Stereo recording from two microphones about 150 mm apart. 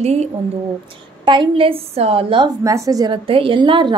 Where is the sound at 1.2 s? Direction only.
30° right (ahead or behind).